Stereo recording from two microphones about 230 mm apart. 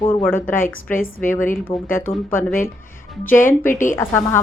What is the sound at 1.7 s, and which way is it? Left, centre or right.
Speech, left.